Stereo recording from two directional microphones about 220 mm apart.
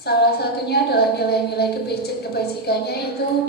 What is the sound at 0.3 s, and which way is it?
A woman's voice, 45° left (ahead or behind).